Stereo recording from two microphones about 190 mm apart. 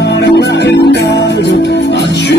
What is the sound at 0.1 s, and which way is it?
Music, 65° left (ahead or behind).